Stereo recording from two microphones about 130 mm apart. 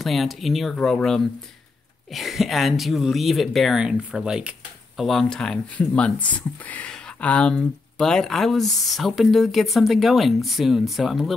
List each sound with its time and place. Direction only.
0.0 s speech: centre (ahead or behind)